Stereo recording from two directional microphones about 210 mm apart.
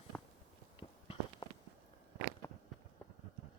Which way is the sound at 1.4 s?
20° left (ahead or behind).